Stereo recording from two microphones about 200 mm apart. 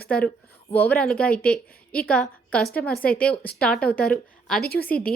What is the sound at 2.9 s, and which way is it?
Speech, 50° left (ahead or behind).